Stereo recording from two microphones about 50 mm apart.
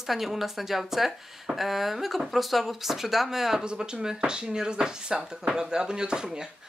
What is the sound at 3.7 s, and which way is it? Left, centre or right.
Speech, centre.